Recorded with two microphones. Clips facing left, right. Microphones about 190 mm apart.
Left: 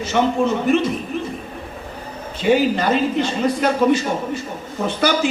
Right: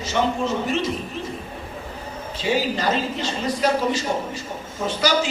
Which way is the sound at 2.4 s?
55° left (ahead or behind).